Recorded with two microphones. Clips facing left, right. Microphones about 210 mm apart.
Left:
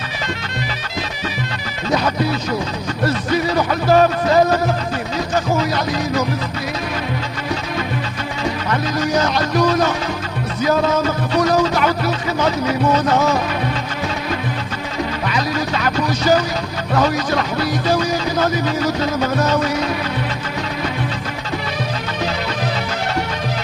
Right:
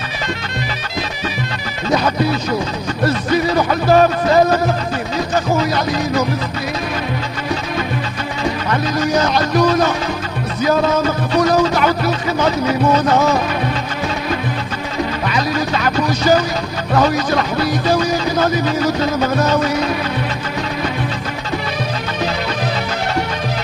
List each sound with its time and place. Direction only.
1.9 s music: 40° right (ahead or behind)
3.5 s speech: 45° right (ahead or behind)
5.6 s music: 40° right (ahead or behind)
9.2 s music: 40° right (ahead or behind)
11.3 s speech: 45° right (ahead or behind)
15.2 s speech: 45° right (ahead or behind)